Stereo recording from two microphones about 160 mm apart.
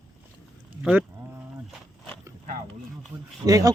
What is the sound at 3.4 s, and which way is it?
Speech, 20° right (ahead or behind).